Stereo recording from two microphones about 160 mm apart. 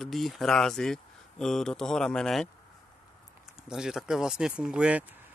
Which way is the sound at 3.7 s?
5° right (ahead or behind).